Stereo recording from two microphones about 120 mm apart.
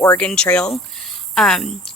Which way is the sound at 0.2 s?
10° left (ahead or behind).